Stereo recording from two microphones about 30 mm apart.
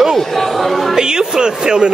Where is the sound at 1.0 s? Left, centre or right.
Right.